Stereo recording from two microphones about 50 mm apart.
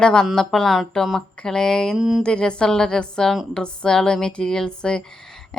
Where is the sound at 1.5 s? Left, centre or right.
Centre.